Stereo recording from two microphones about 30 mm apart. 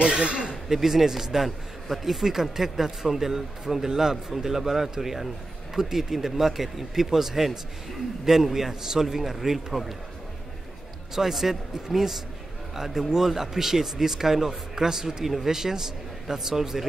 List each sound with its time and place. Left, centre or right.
0.0 s speech: right
0.7 s speech: centre
11.1 s a man's voice: centre